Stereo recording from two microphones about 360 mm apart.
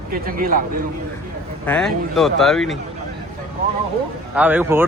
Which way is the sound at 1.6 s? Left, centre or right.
Centre.